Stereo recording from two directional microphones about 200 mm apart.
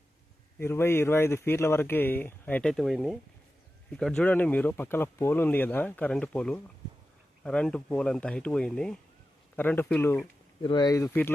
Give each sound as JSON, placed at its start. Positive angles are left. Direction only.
{"t": 0.6, "sound": "speech", "side_deg": 10}
{"t": 10.6, "sound": "speech", "side_deg": 20}